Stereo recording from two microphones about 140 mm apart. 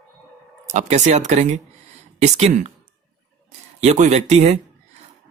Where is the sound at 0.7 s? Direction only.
55° right (ahead or behind).